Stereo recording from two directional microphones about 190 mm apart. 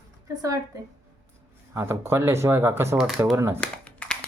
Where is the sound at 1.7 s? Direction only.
15° right (ahead or behind).